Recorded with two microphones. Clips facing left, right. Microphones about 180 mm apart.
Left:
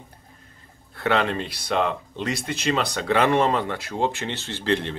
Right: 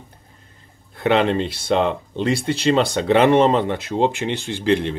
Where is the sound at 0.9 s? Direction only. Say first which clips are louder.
Right 5 dB; 20° right (ahead or behind).